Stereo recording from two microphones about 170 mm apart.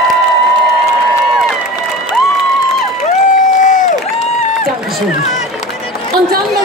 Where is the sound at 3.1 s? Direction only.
45° left (ahead or behind).